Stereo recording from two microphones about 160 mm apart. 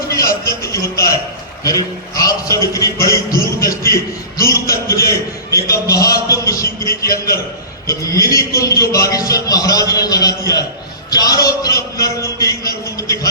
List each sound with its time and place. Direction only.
0.4 s music: 20° left (ahead or behind)
1.6 s a man's voice: 20° left (ahead or behind)
7.9 s a man's voice: 20° left (ahead or behind)